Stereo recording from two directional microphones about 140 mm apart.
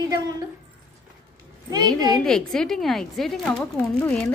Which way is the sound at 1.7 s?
30° right (ahead or behind).